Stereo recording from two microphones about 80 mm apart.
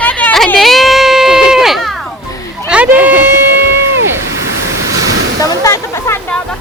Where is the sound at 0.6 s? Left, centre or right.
Centre.